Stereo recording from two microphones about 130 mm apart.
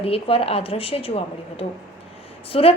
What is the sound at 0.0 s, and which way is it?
A woman's voice, 50° left (ahead or behind).